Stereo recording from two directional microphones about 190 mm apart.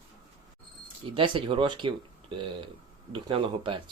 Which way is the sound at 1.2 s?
25° right (ahead or behind).